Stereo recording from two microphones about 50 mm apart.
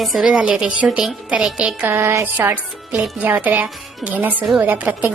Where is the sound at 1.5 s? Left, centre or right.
Right.